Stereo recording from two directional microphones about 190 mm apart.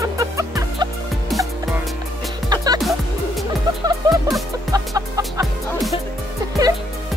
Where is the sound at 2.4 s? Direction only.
20° right (ahead or behind).